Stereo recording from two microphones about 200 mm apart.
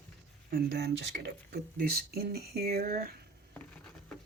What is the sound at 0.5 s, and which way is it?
Speech, 55° right (ahead or behind).